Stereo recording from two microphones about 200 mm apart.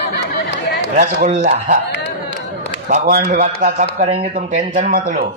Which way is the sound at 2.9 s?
40° right (ahead or behind).